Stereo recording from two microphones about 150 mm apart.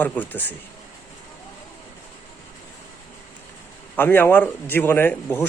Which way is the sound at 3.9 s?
15° left (ahead or behind).